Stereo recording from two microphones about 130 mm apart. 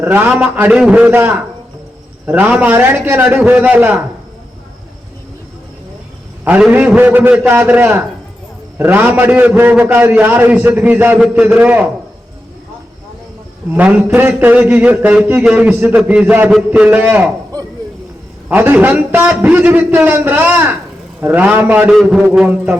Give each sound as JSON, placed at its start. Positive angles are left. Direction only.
{"t": 0.0, "sound": "a man's voice", "side_deg": -15}
{"t": 6.4, "sound": "a man's voice", "side_deg": -15}
{"t": 13.7, "sound": "a man's voice", "side_deg": -10}
{"t": 18.4, "sound": "a man's voice", "side_deg": -10}